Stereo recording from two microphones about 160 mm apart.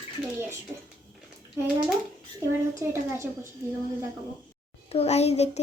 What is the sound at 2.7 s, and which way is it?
Speech, 20° right (ahead or behind).